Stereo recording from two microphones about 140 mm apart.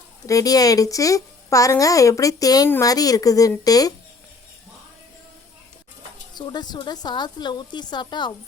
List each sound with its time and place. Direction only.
0.3 s a woman's voice: 25° left (ahead or behind)
6.3 s a woman's voice: 30° left (ahead or behind)